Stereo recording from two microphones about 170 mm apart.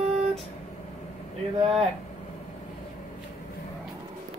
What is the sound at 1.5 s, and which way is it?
Speech, 35° right (ahead or behind).